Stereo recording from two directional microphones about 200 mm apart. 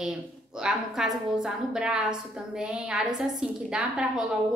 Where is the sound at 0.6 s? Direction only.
5° right (ahead or behind).